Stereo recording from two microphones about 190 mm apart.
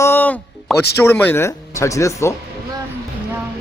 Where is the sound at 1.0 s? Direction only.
10° left (ahead or behind).